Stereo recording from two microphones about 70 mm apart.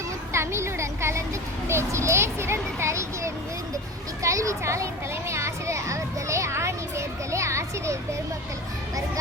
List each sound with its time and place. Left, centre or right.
0.3 s a sound: right
1.6 s a child's voice: right
5.3 s children playing: right